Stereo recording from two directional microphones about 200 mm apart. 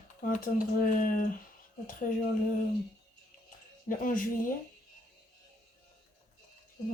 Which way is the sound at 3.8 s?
45° left (ahead or behind).